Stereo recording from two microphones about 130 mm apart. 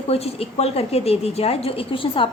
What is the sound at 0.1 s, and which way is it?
A woman's voice, 50° left (ahead or behind).